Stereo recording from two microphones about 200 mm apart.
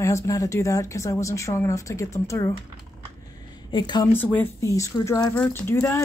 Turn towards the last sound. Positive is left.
turn(degrees=10)  # may be behind; listen again after turning